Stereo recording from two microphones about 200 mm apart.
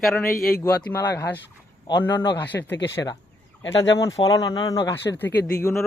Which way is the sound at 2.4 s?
10° left (ahead or behind).